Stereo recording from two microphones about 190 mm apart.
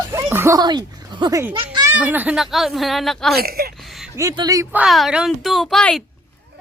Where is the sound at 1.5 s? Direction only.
25° right (ahead or behind).